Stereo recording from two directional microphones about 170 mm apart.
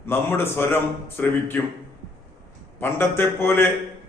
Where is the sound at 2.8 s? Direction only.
15° left (ahead or behind).